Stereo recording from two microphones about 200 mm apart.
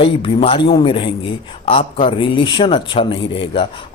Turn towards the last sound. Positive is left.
turn(degrees=25)  # may be behind; listen again after turning